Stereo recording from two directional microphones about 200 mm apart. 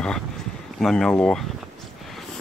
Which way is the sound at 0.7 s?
5° left (ahead or behind).